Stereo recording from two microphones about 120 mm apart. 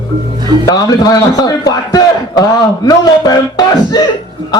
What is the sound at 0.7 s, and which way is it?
A man's voice, 30° left (ahead or behind).